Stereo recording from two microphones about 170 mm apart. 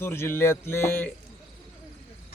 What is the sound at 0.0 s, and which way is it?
A man's voice, 15° left (ahead or behind).